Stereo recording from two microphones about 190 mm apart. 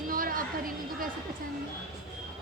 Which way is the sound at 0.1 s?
45° right (ahead or behind).